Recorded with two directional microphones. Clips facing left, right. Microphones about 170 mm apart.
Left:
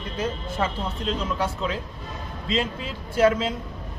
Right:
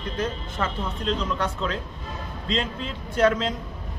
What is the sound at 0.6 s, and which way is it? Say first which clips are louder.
A man's voice: left 1 dB; 15° left (ahead or behind).